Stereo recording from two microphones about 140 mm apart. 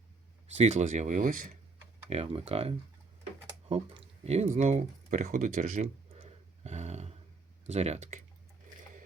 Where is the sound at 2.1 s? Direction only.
45° right (ahead or behind).